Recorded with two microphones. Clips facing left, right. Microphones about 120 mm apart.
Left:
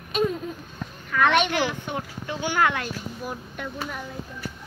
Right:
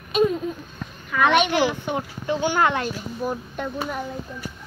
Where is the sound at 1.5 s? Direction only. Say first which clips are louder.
Right 4 dB; 20° right (ahead or behind).